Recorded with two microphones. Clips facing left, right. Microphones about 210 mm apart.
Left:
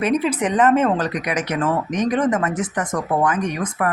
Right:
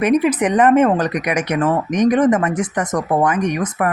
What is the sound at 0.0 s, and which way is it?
A woman's voice, 10° right (ahead or behind).